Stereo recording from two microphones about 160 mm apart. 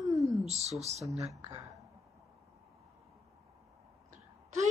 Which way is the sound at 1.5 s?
20° right (ahead or behind).